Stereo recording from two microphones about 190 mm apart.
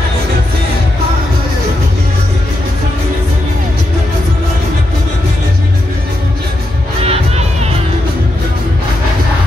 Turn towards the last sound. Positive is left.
turn(degrees=-35)  # may be behind; listen again after turning